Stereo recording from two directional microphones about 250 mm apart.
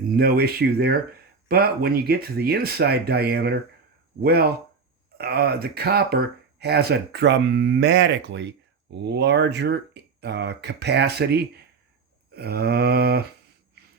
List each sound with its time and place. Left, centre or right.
0.2 s speech: right